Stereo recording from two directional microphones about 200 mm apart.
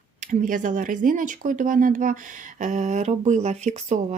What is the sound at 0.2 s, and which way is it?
Speech, 40° right (ahead or behind).